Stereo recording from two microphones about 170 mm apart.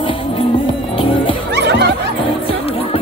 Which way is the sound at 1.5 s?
80° right.